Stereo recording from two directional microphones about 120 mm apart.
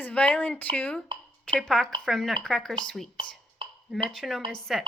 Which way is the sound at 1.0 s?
45° right (ahead or behind).